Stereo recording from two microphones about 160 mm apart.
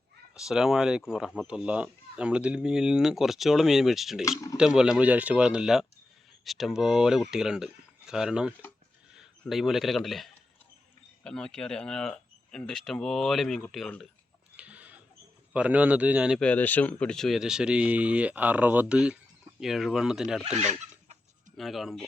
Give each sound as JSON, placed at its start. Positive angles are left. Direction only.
{"t": 0.3, "sound": "speech", "side_deg": -5}
{"t": 4.3, "sound": "speech", "side_deg": 20}
{"t": 4.5, "sound": "speech", "side_deg": -5}
{"t": 14.5, "sound": "a sound", "side_deg": -10}
{"t": 15.5, "sound": "a man's voice", "side_deg": -10}
{"t": 16.4, "sound": "speech", "side_deg": 10}
{"t": 21.5, "sound": "speech", "side_deg": 0}